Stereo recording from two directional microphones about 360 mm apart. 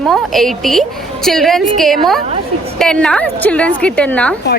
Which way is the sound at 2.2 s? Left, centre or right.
Centre.